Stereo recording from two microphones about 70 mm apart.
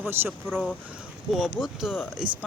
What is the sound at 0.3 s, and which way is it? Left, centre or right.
Speech, centre.